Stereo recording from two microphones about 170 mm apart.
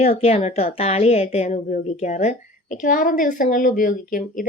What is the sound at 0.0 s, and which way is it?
A woman's voice, 40° left (ahead or behind).